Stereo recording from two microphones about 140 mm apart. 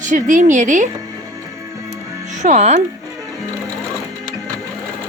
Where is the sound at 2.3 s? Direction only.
55° right (ahead or behind).